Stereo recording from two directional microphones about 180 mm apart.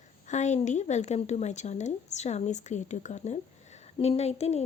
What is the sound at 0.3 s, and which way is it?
A woman's voice, 40° left (ahead or behind).